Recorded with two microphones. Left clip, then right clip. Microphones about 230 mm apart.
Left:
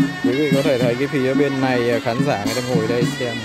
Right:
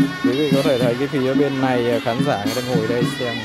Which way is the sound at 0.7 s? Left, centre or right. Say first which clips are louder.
Even; centre.